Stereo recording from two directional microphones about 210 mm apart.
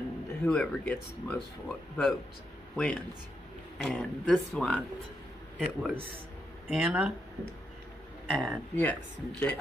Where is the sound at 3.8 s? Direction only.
5° left (ahead or behind).